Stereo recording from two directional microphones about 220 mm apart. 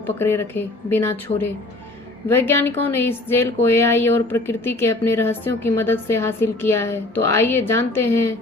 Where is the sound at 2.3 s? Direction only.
10° left (ahead or behind).